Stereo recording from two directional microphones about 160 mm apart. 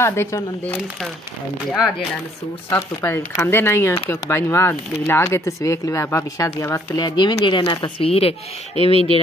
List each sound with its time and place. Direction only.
0.0 s speech: 15° left (ahead or behind)
3.0 s speech: 15° left (ahead or behind); by 9.2 s 35° left (ahead or behind)